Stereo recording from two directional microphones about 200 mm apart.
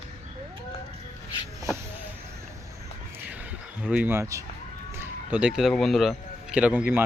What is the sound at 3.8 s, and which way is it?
Speech, 5° right (ahead or behind).